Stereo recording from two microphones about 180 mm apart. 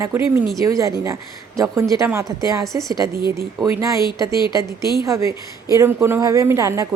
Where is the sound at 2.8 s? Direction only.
20° right (ahead or behind).